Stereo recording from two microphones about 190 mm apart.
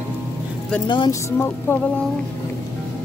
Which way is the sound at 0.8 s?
25° left (ahead or behind).